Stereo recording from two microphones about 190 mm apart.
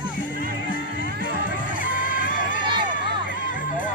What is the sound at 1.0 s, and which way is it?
Music, 65° right (ahead or behind).